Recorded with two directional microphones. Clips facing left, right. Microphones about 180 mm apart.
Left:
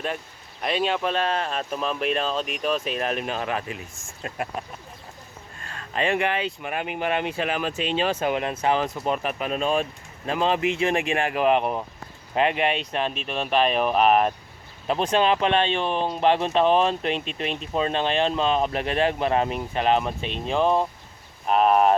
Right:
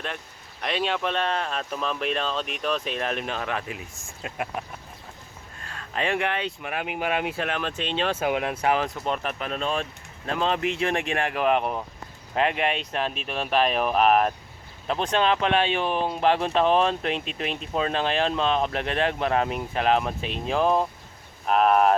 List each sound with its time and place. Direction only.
0.6 s speech: 5° left (ahead or behind)
5.6 s speech: centre (ahead or behind)
8.2 s speech: 5° right (ahead or behind)
9.0 s speech: 5° left (ahead or behind)
15.5 s speech: 10° right (ahead or behind)